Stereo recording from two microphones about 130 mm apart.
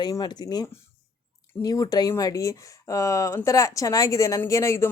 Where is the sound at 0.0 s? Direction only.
30° left (ahead or behind).